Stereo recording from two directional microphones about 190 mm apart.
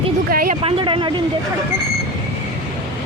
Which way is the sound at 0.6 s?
25° right (ahead or behind).